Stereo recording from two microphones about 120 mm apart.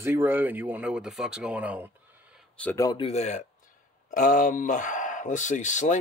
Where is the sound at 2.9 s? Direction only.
60° left (ahead or behind).